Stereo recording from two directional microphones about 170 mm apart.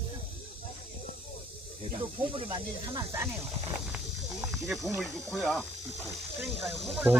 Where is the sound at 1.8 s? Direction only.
30° right (ahead or behind).